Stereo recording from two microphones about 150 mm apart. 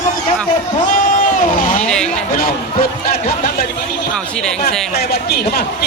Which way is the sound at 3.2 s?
75° left (ahead or behind).